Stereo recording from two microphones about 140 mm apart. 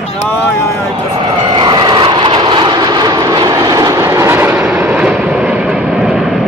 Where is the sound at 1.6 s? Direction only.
30° right (ahead or behind); by 6.1 s 5° right (ahead or behind).